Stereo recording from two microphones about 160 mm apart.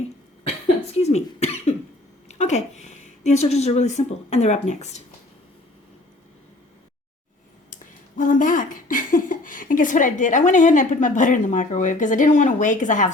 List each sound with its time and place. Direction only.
0.9 s cough: 45° left (ahead or behind)
2.2 s speech: 45° left (ahead or behind)
7.7 s speech: 55° left (ahead or behind)